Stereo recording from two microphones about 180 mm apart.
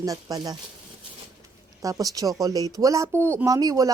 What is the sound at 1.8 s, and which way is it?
Speech, 20° right (ahead or behind).